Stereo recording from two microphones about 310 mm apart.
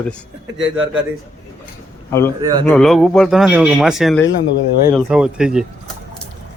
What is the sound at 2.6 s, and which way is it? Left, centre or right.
Speech, centre.